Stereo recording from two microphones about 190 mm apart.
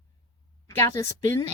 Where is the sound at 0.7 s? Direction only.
15° left (ahead or behind).